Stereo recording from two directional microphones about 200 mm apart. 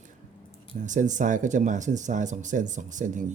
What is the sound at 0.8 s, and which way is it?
Speech, 40° right (ahead or behind).